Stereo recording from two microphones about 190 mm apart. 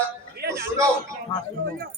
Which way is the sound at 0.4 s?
55° right (ahead or behind).